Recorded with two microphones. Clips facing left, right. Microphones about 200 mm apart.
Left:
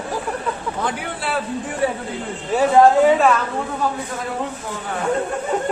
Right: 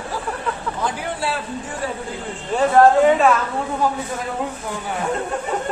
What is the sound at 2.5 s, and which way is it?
Speech, 5° left (ahead or behind).